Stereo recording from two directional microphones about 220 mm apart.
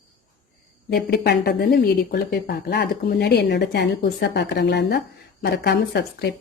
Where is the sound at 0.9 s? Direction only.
45° left (ahead or behind).